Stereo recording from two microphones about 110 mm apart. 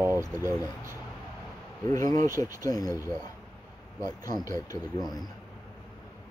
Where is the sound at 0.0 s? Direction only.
25° right (ahead or behind).